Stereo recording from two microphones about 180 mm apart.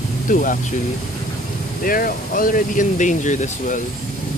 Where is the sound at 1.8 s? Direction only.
50° left (ahead or behind).